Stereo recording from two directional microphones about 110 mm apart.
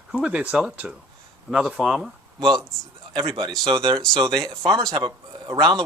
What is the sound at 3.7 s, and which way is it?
Speech, 50° right (ahead or behind).